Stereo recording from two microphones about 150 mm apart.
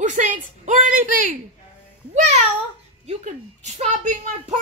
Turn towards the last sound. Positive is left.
turn(degrees=-55)  # may be behind; listen again after turning